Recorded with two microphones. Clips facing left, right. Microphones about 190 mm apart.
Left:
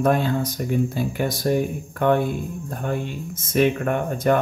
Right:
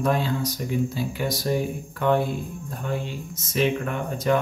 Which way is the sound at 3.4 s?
50° left (ahead or behind).